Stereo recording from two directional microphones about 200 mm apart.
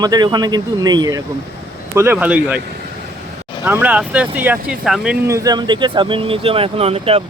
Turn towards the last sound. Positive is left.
turn(degrees=-30)  # may be behind; listen again after turning